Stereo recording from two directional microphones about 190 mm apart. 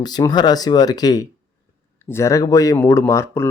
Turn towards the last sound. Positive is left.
turn(degrees=15)  # may be behind; listen again after turning